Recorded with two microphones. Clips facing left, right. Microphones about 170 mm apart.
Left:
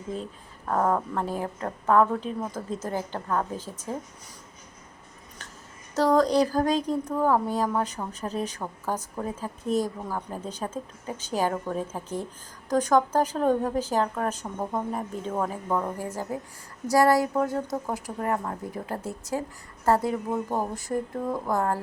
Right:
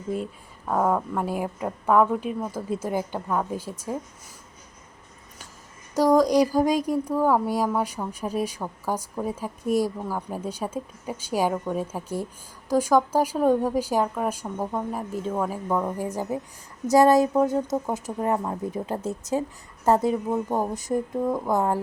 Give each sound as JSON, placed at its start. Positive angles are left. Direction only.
{"t": 0.7, "sound": "speech", "side_deg": -5}
{"t": 5.9, "sound": "speech", "side_deg": -10}
{"t": 16.0, "sound": "speech", "side_deg": -15}